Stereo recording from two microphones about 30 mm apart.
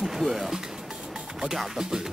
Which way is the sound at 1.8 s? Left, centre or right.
Right.